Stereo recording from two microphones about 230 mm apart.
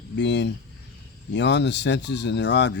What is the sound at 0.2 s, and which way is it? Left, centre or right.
Speech, left.